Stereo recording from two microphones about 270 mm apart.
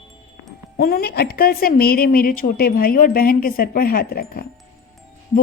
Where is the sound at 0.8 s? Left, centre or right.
Left.